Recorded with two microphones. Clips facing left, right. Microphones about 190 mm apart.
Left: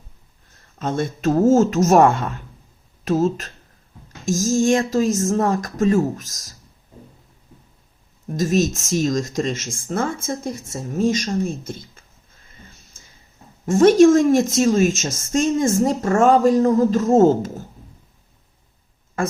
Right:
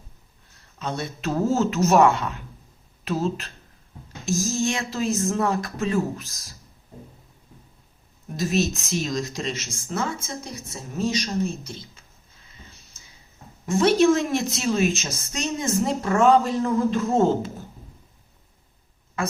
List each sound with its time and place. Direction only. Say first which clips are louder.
0.8 s a woman's voice: left 7 dB; 50° left (ahead or behind)
8.4 s a woman's voice: left 4 dB; 45° left (ahead or behind)
12.5 s a sound: left 3 dB; 50° left (ahead or behind)
13.7 s a woman's voice: left 6 dB; 45° left (ahead or behind)
19.2 s speech: left 4 dB; 50° left (ahead or behind)